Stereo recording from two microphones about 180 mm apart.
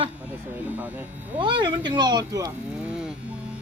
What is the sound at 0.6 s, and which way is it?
Speech, 10° right (ahead or behind).